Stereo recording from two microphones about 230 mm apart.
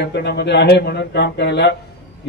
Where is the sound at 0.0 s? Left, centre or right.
Left.